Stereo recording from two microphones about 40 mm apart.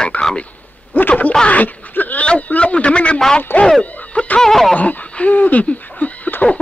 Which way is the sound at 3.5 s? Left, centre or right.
Left.